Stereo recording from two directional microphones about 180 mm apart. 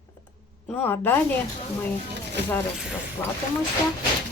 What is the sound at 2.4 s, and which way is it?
Speech, 75° right (ahead or behind).